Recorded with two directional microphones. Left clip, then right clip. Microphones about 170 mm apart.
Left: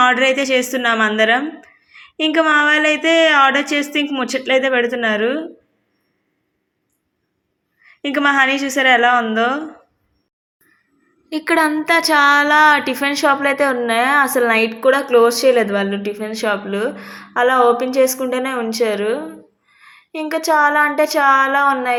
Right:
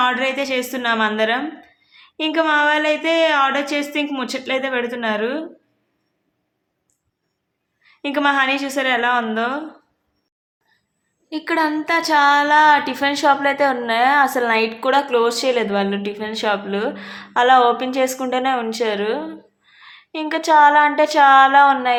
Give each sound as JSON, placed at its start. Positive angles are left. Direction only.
{"t": 0.0, "sound": "speech", "side_deg": 25}
{"t": 8.1, "sound": "speech", "side_deg": 20}
{"t": 11.3, "sound": "speech", "side_deg": 20}